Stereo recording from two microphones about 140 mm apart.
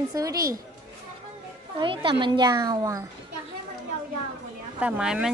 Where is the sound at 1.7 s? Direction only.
40° right (ahead or behind).